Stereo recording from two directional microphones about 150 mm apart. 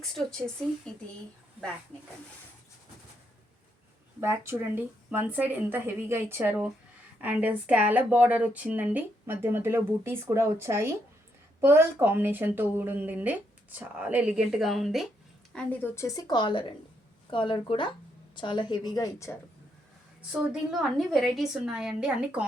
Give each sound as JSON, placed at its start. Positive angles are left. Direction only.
{"t": 0.0, "sound": "a woman's voice", "side_deg": 5}
{"t": 4.2, "sound": "a woman's voice", "side_deg": -15}
{"t": 15.5, "sound": "a woman's voice", "side_deg": 15}
{"t": 20.3, "sound": "a woman's voice", "side_deg": -5}